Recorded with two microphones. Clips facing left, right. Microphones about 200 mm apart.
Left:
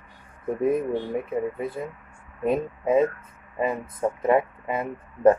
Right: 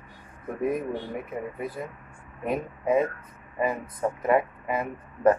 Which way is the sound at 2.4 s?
25° left (ahead or behind).